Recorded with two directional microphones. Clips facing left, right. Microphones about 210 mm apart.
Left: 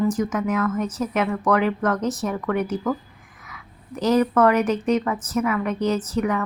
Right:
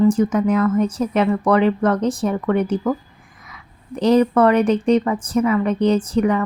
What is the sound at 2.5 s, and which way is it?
Speech, 30° right (ahead or behind).